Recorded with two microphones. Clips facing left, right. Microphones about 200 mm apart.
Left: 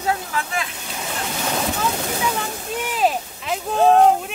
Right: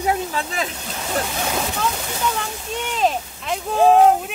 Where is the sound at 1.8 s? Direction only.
5° left (ahead or behind).